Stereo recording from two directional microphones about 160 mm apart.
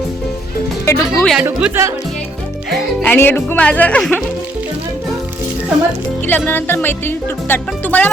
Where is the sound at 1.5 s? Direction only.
15° right (ahead or behind).